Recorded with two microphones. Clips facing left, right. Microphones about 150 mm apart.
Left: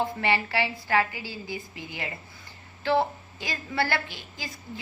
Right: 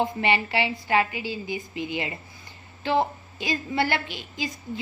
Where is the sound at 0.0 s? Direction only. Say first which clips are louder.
Right 2 dB; 20° right (ahead or behind).